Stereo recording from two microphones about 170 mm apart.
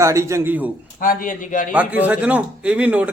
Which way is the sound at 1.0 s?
55° left (ahead or behind).